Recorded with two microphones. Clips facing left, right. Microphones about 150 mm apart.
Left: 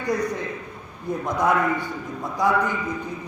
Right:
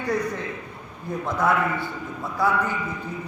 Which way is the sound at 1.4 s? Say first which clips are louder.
Left 1 dB; 15° left (ahead or behind).